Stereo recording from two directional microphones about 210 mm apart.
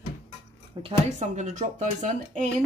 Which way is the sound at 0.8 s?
35° right (ahead or behind).